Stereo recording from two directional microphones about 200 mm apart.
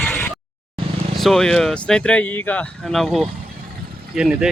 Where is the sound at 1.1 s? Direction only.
Centre (ahead or behind).